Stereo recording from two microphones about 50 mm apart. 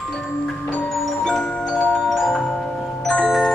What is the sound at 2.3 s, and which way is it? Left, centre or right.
Music, centre.